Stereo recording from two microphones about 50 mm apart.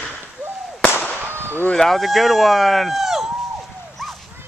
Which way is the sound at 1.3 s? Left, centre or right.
Right.